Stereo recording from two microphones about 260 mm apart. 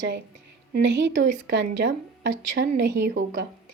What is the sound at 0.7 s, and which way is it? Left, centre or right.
A woman's voice, right.